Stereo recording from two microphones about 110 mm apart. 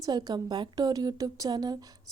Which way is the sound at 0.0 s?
40° right (ahead or behind).